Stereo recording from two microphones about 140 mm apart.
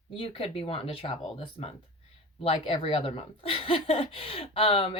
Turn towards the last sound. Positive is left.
turn(degrees=45)  # may be behind; listen again after turning